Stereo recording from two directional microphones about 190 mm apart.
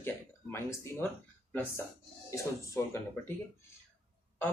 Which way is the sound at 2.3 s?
15° left (ahead or behind).